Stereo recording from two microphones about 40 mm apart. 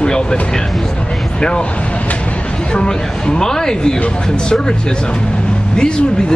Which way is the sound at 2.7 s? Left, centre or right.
Left.